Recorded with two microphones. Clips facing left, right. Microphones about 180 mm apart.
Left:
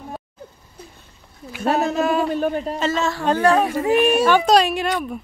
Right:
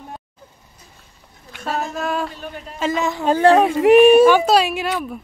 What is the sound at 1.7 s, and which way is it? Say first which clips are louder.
Speech: left 5 dB; 65° left (ahead or behind).